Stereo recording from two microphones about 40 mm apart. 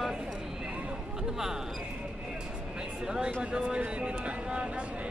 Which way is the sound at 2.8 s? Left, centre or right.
Right.